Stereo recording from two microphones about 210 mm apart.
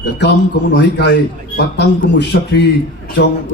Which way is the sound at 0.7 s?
55° left (ahead or behind).